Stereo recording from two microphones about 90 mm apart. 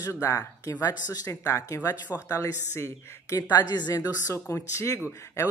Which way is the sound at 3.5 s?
50° left (ahead or behind).